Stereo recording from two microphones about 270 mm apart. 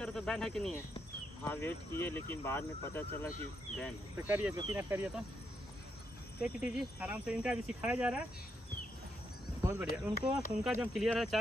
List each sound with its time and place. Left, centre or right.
0.0 s speech: centre
4.3 s speech: centre
6.4 s speech: centre
9.6 s cricket: centre
9.8 s speech: left
10.6 s speech: centre